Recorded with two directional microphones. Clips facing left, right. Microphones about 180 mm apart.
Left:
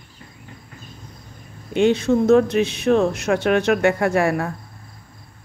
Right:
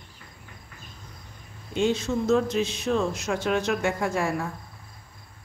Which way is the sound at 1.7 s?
65° left (ahead or behind).